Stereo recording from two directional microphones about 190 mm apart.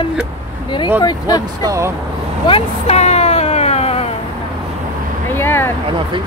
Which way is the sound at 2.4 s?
30° left (ahead or behind).